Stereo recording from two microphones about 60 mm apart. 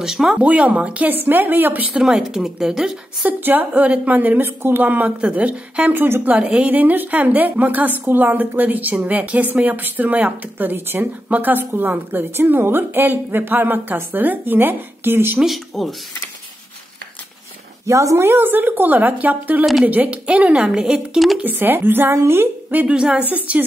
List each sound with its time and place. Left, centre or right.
0.0 s speech: centre
0.4 s a woman's voice: right
2.0 s speech: centre
3.3 s a woman's voice: right
15.3 s speech: centre
17.8 s a woman's voice: right; by 21.2 s centre
21.4 s a woman's voice: right
22.9 s a woman's voice: centre